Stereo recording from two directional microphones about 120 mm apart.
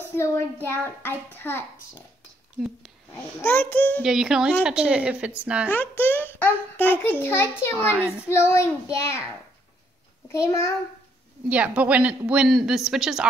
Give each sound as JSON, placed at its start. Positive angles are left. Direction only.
{"t": 0.0, "sound": "child singing", "side_deg": 20}
{"t": 3.4, "sound": "a child's voice", "side_deg": 15}
{"t": 4.0, "sound": "a woman's voice", "side_deg": -5}
{"t": 5.7, "sound": "a child's voice", "side_deg": 15}
{"t": 7.9, "sound": "a woman's voice", "side_deg": -10}
{"t": 8.3, "sound": "child singing", "side_deg": 20}
{"t": 10.3, "sound": "child singing", "side_deg": 25}
{"t": 11.4, "sound": "a woman's voice", "side_deg": -10}